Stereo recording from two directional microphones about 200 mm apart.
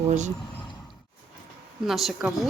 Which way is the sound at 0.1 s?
35° right (ahead or behind).